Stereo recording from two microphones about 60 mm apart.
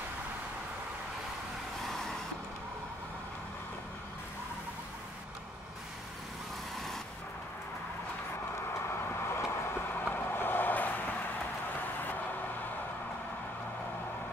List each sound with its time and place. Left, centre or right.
1.9 s vehicle: centre
8.8 s vehicle: left